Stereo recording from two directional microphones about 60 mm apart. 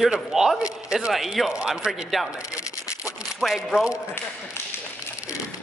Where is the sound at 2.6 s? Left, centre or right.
Left.